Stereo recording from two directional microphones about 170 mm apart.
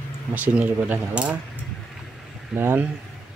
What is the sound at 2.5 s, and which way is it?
Speech, 10° right (ahead or behind).